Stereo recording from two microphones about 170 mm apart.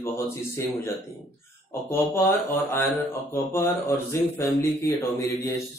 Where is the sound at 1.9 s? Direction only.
10° left (ahead or behind).